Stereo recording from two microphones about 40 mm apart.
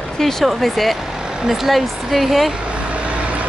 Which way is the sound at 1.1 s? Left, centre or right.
Centre.